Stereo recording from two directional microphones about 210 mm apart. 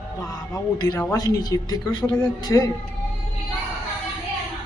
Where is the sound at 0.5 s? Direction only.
15° left (ahead or behind).